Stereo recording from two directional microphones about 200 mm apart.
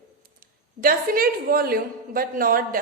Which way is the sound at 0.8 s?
45° right (ahead or behind).